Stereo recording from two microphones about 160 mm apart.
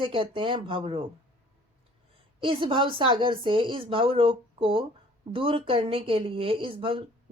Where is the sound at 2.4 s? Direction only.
35° right (ahead or behind).